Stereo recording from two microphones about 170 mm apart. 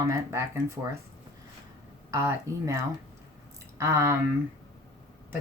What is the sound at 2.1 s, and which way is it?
Speech, 15° right (ahead or behind).